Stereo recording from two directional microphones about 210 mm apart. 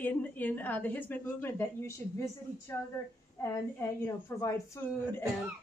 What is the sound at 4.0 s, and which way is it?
A woman's voice, 15° left (ahead or behind).